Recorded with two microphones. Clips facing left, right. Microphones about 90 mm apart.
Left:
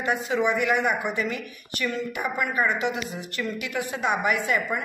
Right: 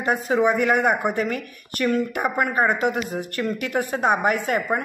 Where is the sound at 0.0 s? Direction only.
40° right (ahead or behind).